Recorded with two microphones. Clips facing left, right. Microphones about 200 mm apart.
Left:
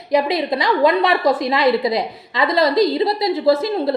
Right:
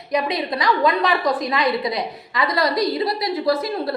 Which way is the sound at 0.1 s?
25° left (ahead or behind).